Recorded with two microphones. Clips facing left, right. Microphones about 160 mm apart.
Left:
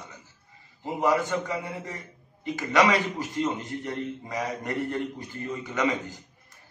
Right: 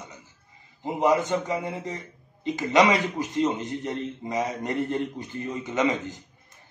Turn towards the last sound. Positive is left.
turn(degrees=-20)  # may be behind; listen again after turning